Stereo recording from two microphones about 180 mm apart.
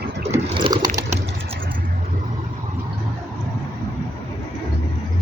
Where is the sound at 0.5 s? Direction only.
25° right (ahead or behind).